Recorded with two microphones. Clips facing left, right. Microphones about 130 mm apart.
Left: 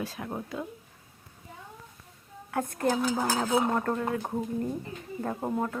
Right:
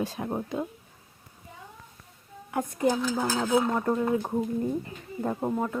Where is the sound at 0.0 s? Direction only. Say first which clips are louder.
Right 4 dB; 25° right (ahead or behind).